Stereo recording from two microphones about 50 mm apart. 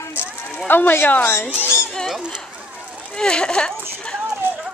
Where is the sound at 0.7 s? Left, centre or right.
Left.